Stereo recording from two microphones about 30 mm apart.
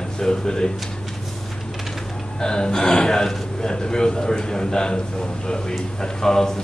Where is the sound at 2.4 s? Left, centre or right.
Left.